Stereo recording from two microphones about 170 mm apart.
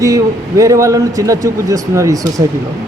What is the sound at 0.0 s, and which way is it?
A man's voice, 20° right (ahead or behind).